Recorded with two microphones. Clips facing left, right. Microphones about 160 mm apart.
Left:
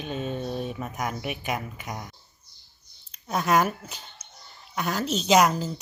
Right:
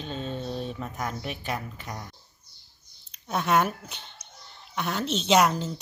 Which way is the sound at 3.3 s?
Centre (ahead or behind).